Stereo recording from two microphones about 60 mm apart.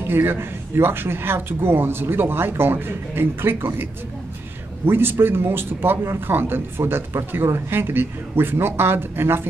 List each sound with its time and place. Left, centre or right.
0.0 s a man's voice: right
4.8 s a man's voice: right